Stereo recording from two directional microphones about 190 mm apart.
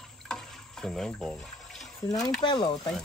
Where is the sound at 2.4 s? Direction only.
25° left (ahead or behind).